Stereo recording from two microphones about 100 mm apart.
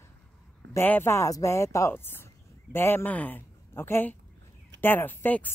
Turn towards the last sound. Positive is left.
turn(degrees=20)  # may be behind; listen again after turning